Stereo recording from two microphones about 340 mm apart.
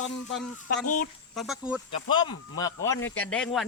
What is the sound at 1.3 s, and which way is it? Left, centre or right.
Speech, centre.